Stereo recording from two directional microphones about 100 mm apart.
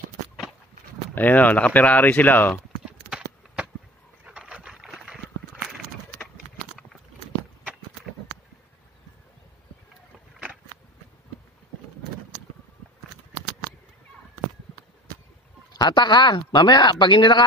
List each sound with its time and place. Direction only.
1.1 s speech: 15° left (ahead or behind)
2.5 s clip-clop: 5° right (ahead or behind)
4.2 s boat: 10° right (ahead or behind)
15.8 s speech: 45° left (ahead or behind)